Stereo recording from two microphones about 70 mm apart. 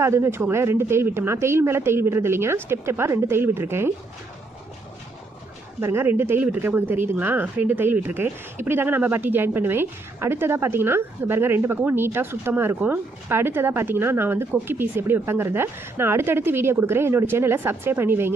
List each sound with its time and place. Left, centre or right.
0.0 s speech: right
5.8 s speech: right